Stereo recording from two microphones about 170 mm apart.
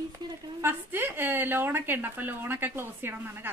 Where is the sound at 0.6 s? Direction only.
15° right (ahead or behind).